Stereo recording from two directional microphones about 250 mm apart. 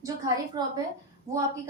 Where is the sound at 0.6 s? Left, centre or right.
Centre.